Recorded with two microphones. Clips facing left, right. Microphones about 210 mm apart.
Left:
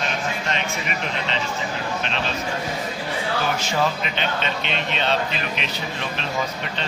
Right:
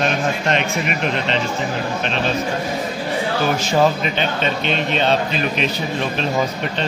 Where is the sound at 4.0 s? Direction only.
45° right (ahead or behind).